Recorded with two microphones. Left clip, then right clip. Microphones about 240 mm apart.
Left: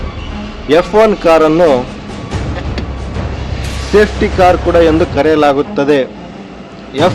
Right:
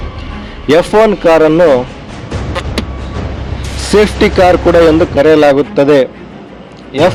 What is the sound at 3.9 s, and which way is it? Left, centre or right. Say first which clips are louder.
Speech: right 2 dB; right.